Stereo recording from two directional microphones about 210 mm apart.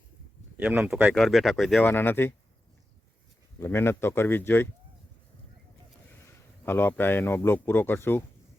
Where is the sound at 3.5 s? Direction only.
10° left (ahead or behind).